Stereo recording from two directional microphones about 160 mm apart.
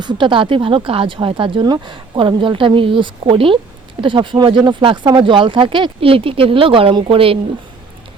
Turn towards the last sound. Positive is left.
turn(degrees=-35)  # may be behind; listen again after turning